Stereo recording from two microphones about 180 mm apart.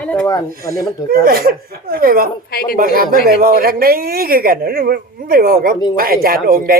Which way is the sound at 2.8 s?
55° right (ahead or behind).